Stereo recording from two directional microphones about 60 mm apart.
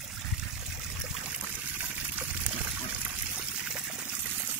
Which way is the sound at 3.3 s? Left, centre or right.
Right.